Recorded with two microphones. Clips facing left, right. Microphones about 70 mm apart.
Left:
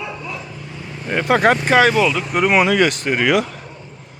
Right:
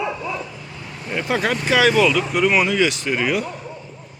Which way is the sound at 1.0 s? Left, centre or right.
Left.